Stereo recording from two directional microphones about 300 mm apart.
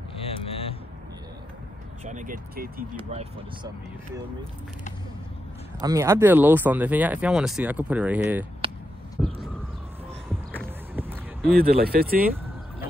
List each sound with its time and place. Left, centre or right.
0.2 s vehicle: centre
2.0 s speech: right
5.8 s speech: centre
10.3 s a sound: centre
11.5 s speech: right